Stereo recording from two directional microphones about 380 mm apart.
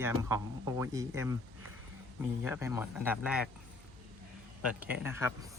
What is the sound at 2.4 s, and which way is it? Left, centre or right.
Speech, centre.